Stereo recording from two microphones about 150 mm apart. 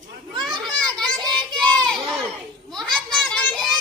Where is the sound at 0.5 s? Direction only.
30° right (ahead or behind).